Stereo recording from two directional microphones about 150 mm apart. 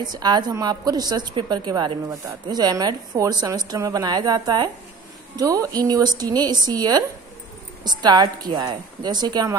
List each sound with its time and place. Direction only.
0.0 s a woman's voice: 30° right (ahead or behind)